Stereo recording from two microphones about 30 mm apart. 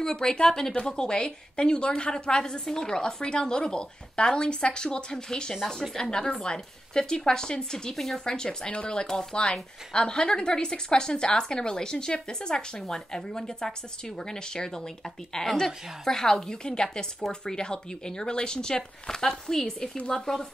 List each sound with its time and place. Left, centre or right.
0.0 s a woman's voice: left
7.9 s a woman's voice: centre
8.3 s a woman's voice: left
9.0 s a woman's voice: centre
9.3 s a woman's voice: left